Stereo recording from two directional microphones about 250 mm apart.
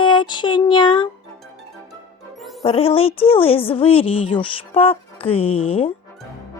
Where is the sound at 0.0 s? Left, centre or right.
Centre.